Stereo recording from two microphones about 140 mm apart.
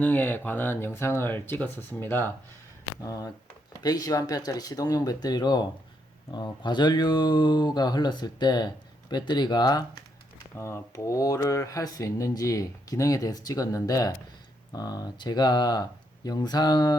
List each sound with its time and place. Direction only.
0.0 s speech: 15° left (ahead or behind); by 17.0 s 30° left (ahead or behind)